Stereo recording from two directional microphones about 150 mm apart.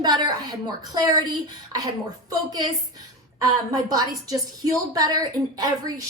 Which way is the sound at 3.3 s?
25° right (ahead or behind).